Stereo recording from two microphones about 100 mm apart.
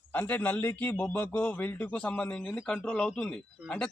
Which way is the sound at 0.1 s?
20° left (ahead or behind).